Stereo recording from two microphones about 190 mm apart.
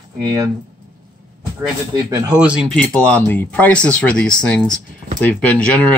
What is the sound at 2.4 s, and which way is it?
Speech, 5° right (ahead or behind).